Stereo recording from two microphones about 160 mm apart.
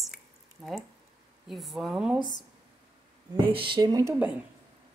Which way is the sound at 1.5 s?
Centre (ahead or behind).